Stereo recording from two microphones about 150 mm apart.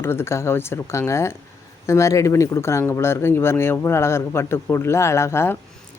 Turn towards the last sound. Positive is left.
turn(degrees=15)  # may be behind; listen again after turning